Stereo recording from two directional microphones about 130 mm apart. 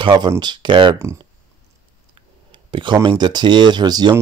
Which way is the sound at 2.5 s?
40° right (ahead or behind).